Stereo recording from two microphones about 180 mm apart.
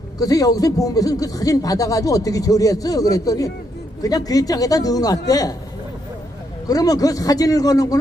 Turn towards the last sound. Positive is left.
turn(degrees=20)  # may be behind; listen again after turning